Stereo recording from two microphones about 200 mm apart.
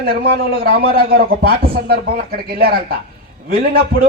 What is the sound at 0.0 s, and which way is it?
A man's voice, 50° right (ahead or behind).